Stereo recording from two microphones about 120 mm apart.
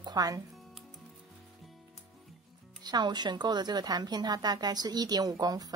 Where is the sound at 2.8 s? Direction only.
35° right (ahead or behind).